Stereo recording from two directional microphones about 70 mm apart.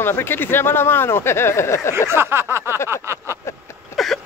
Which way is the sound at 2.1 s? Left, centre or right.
Right.